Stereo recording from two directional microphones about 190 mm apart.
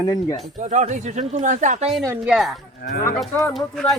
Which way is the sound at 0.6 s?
40° right (ahead or behind).